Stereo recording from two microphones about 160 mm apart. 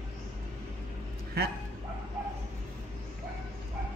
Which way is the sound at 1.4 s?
75° right (ahead or behind).